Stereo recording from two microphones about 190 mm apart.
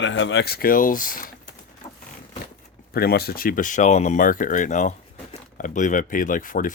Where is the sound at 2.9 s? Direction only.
55° left (ahead or behind).